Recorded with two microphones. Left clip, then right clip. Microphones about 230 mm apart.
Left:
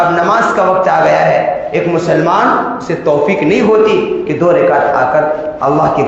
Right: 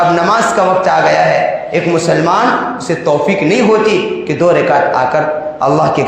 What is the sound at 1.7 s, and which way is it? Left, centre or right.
A man's voice, right.